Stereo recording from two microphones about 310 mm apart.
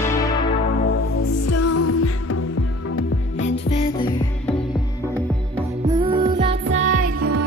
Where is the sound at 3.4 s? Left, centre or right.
Centre.